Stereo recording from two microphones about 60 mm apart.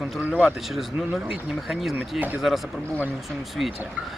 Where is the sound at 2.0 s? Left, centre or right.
Right.